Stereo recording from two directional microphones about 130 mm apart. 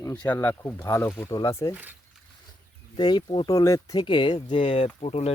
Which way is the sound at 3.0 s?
35° left (ahead or behind).